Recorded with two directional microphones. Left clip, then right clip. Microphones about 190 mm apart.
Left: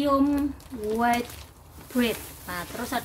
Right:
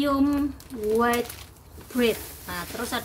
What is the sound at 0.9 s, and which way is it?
A woman's voice, 10° left (ahead or behind).